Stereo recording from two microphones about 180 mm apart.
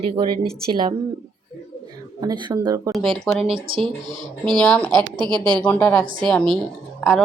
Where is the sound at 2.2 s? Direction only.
25° right (ahead or behind).